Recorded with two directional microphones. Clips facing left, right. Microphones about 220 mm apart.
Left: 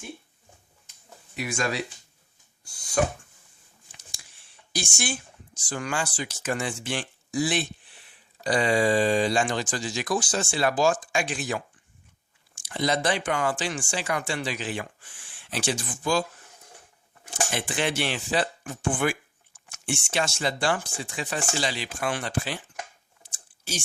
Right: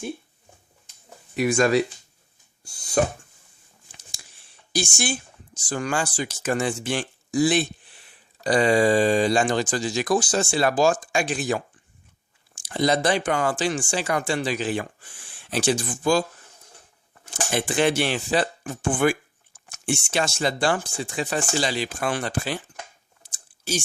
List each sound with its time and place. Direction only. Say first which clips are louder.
1.5 s speech: right 9 dB; 45° right (ahead or behind)
4.2 s a sound: right 2 dB; 40° right (ahead or behind)
5.6 s speech: right 4 dB; 40° right (ahead or behind)
12.6 s speech: right 4 dB; 40° right (ahead or behind)
17.5 s speech: right 8 dB; 40° right (ahead or behind)